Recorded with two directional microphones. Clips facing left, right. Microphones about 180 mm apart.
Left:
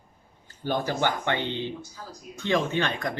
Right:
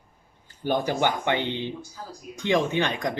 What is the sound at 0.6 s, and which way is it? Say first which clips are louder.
Speech: right 2 dB; 15° right (ahead or behind).